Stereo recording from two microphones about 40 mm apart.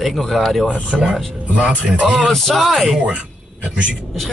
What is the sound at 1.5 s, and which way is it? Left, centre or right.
Speech, right.